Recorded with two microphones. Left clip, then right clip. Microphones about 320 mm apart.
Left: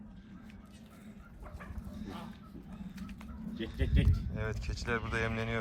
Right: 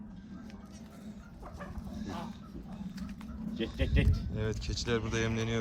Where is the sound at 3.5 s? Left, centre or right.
Centre.